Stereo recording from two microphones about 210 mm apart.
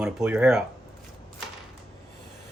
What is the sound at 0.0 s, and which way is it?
Speech, 5° right (ahead or behind).